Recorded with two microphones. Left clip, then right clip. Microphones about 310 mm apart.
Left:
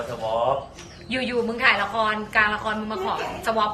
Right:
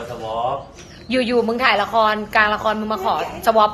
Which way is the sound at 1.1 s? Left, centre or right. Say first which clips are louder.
Right 7 dB; centre.